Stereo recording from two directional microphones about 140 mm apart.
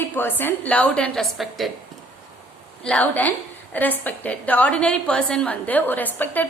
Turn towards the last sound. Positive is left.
turn(degrees=15)  # may be behind; listen again after turning